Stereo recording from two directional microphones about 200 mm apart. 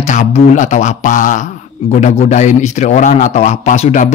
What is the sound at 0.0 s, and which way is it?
Speech, 35° left (ahead or behind).